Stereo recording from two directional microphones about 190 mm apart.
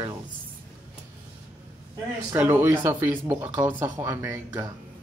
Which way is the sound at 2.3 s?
10° right (ahead or behind).